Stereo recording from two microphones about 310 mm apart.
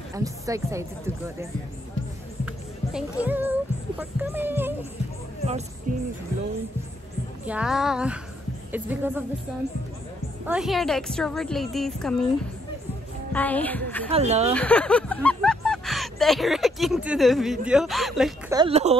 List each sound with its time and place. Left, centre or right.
0.1 s speech: centre
2.4 s music: centre
4.0 s speech: centre
5.9 s speech: right
7.4 s a woman's voice: centre
10.4 s a woman's voice: centre
13.3 s a woman's voice: centre
14.1 s speech: right
14.5 s a sound: centre
17.6 s a woman's voice: centre
18.6 s speech: centre